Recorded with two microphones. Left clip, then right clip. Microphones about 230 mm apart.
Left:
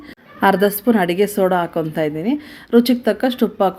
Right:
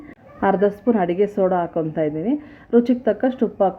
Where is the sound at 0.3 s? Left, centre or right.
Centre.